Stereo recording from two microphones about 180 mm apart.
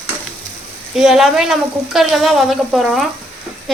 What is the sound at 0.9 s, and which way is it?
Speech, centre (ahead or behind).